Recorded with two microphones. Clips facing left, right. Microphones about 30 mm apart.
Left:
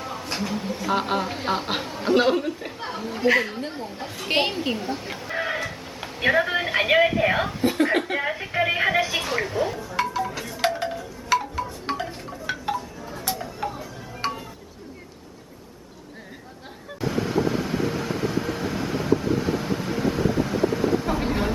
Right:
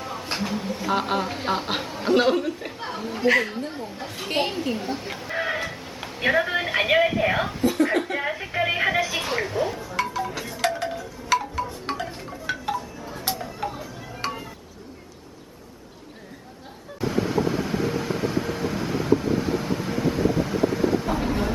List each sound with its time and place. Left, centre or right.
0.0 s a sound: centre
0.3 s speech: centre
3.7 s chatter: centre
4.3 s a woman's voice: left
4.8 s speech: centre
7.6 s chuckle: left
8.0 s speech: centre
10.0 s wind chime: centre
13.3 s a sound: centre
14.2 s a sound: centre
17.0 s vehicle: centre
21.2 s a sound: centre